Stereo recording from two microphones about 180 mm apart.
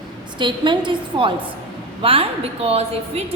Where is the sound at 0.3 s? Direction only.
25° right (ahead or behind).